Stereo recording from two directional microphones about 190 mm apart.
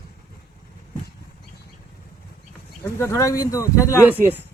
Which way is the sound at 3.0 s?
15° left (ahead or behind).